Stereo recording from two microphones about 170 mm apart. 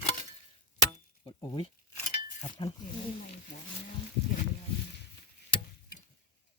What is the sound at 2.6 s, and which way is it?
Speech, 30° left (ahead or behind).